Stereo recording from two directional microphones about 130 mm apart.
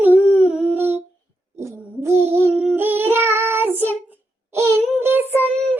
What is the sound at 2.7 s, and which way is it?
Child singing, 15° right (ahead or behind).